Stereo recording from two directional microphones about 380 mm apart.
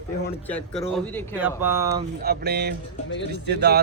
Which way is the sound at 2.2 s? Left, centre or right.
Right.